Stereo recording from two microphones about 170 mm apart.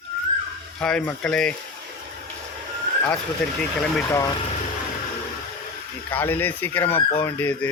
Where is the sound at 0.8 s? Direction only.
5° left (ahead or behind).